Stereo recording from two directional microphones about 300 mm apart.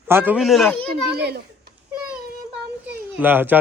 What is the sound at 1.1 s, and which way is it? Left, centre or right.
Speech, right.